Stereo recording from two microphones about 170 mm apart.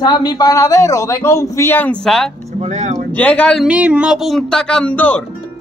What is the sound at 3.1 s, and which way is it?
Speech, 10° left (ahead or behind).